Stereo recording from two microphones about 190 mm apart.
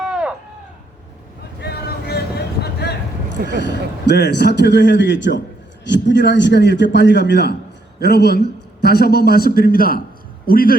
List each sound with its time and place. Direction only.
0.0 s livestock: 5° right (ahead or behind)
1.6 s a sound: 55° left (ahead or behind)
3.6 s a man's voice: 65° left (ahead or behind); by 10.8 s 50° left (ahead or behind)